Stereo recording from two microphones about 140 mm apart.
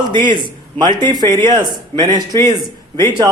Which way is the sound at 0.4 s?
35° right (ahead or behind).